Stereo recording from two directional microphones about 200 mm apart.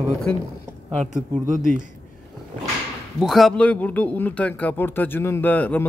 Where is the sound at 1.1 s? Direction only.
40° right (ahead or behind).